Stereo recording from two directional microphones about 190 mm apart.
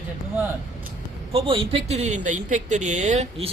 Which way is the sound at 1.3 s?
30° right (ahead or behind).